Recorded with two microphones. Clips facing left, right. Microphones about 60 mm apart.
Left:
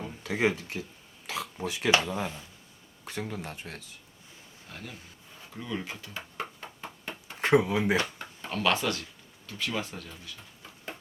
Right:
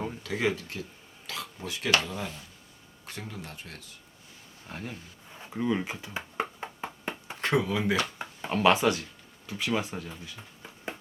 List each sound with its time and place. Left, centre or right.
0.2 s speech: left
4.7 s speech: right
5.4 s a sound: right
7.4 s speech: left
8.2 s speech: centre